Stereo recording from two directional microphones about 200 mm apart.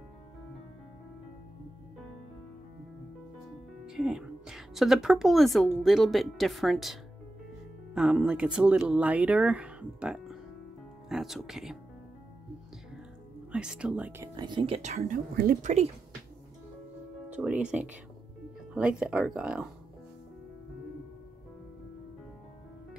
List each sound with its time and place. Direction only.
3.8 s a woman's voice: 5° right (ahead or behind)
13.5 s speech: 5° right (ahead or behind); by 15.9 s 35° right (ahead or behind)
17.3 s speech: 5° right (ahead or behind)